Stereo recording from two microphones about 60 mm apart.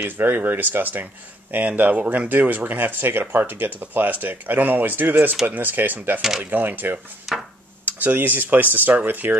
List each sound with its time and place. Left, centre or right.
0.0 s speech: right
7.3 s a sound: centre
7.8 s speech: right